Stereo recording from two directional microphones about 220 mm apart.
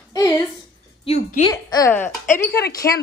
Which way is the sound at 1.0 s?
30° left (ahead or behind).